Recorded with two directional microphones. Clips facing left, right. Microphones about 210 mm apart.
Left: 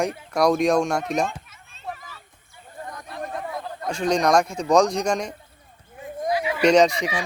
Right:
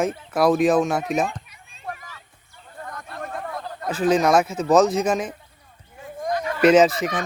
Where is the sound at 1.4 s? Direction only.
15° right (ahead or behind).